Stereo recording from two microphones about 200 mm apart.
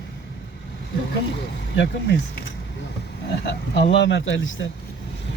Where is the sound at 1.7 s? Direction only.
60° left (ahead or behind).